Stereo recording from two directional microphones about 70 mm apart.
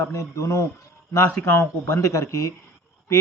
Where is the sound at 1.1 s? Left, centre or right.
Left.